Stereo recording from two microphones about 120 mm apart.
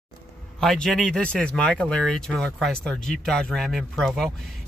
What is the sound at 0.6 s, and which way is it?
Speech, 5° left (ahead or behind).